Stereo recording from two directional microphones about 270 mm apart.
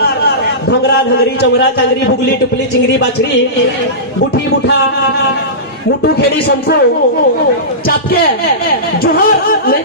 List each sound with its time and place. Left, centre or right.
0.0 s a sound: left
5.9 s a man's voice: left
9.0 s a man's voice: left